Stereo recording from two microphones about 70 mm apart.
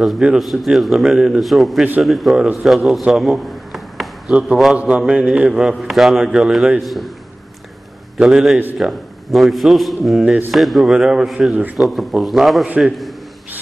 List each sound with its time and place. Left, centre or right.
0.4 s a man's voice: centre
4.3 s a man's voice: centre
6.8 s a man's voice: centre
8.2 s a man's voice: centre